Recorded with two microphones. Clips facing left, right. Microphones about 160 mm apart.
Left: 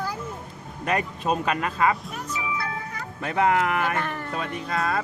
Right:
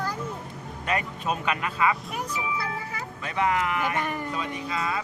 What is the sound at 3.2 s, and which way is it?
Speech, 50° left (ahead or behind).